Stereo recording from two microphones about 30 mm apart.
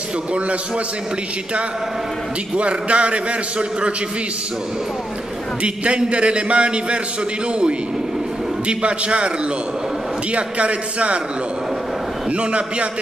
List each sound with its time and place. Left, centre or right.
2.5 s a man's voice: right
5.9 s a man's voice: right
8.6 s a man's voice: right
10.3 s a man's voice: right
12.3 s a man's voice: right